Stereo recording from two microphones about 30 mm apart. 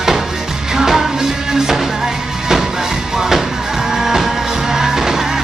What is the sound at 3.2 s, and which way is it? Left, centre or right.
Music, centre.